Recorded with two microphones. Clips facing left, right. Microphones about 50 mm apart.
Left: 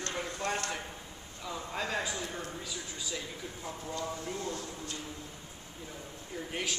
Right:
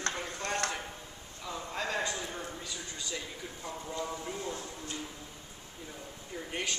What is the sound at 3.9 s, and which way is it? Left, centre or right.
Speech, centre.